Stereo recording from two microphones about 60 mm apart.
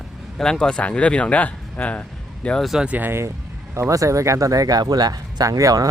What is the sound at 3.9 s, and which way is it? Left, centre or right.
Speech, right.